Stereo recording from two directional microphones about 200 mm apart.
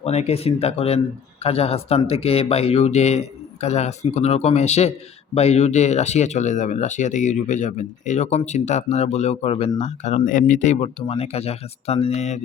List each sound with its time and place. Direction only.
0.0 s speech: 30° left (ahead or behind)